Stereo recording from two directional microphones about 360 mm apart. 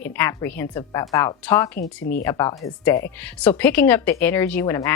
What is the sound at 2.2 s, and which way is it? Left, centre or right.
Speech, centre.